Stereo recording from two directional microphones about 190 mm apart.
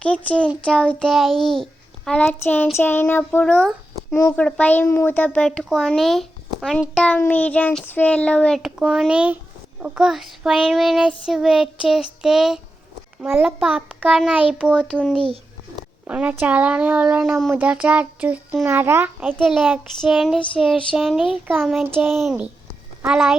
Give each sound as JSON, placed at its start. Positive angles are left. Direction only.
{"t": 0.0, "sound": "a child's voice", "side_deg": 5}
{"t": 15.2, "sound": "a sound", "side_deg": -30}
{"t": 16.0, "sound": "a child's voice", "side_deg": -5}